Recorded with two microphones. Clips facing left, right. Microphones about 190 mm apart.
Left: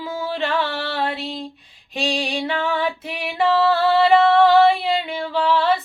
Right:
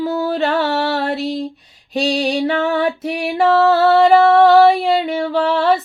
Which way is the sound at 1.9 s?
40° right (ahead or behind).